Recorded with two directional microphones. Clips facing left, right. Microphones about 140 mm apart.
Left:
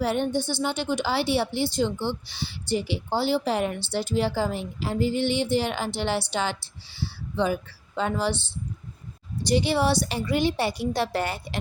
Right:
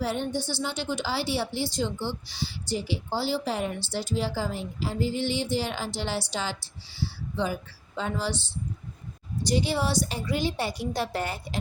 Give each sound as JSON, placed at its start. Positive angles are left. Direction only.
{"t": 0.0, "sound": "a woman's voice", "side_deg": 60}